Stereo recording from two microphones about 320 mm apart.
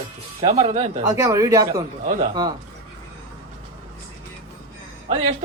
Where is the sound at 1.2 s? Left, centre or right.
Centre.